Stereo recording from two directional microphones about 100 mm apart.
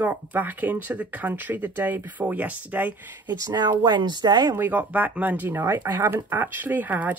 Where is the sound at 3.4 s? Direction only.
40° right (ahead or behind).